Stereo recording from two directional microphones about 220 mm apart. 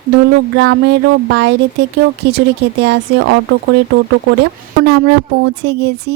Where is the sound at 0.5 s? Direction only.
55° right (ahead or behind).